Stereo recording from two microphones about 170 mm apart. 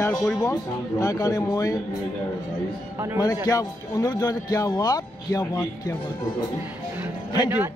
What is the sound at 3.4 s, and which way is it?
Speech, 20° left (ahead or behind).